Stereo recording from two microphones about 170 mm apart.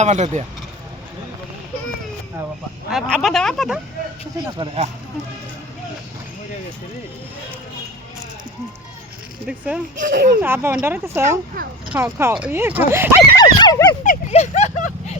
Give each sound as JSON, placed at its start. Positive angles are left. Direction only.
{"t": 0.0, "sound": "speech", "side_deg": -40}
{"t": 2.9, "sound": "speech", "side_deg": 0}
{"t": 4.5, "sound": "speech", "side_deg": -30}
{"t": 9.5, "sound": "speech", "side_deg": -5}
{"t": 10.0, "sound": "speech", "side_deg": -60}
{"t": 10.4, "sound": "speech", "side_deg": -15}
{"t": 13.3, "sound": "dog", "side_deg": 25}
{"t": 14.0, "sound": "speech", "side_deg": 45}